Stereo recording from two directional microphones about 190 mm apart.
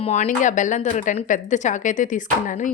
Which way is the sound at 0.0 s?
35° left (ahead or behind).